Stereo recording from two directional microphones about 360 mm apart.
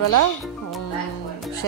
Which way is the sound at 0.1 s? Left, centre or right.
Left.